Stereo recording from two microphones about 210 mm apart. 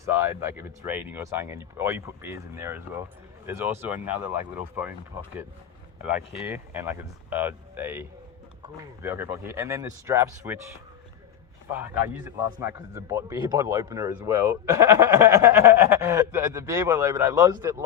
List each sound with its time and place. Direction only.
0.0 s a man's voice: 10° right (ahead or behind)
6.3 s a man's voice: 10° right (ahead or behind)
11.8 s a man's voice: 10° right (ahead or behind)